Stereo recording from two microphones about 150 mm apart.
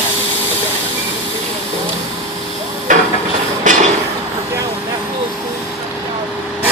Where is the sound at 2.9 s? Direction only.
60° right (ahead or behind).